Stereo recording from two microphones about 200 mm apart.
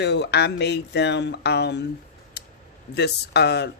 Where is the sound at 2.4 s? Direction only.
55° left (ahead or behind).